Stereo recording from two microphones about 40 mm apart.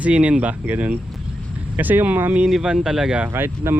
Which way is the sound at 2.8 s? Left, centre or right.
Centre.